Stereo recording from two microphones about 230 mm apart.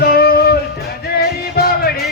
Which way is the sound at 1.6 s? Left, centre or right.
Left.